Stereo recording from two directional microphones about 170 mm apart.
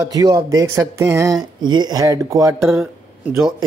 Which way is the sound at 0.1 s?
20° right (ahead or behind).